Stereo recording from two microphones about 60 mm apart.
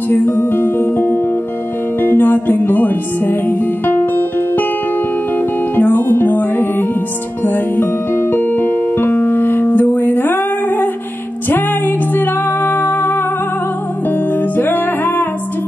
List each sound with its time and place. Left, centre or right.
0.1 s music: left
5.8 s music: left
12.1 s music: left
14.6 s music: left